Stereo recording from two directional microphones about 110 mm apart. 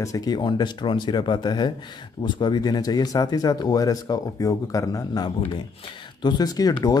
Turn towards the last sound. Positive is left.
turn(degrees=35)  # may be behind; listen again after turning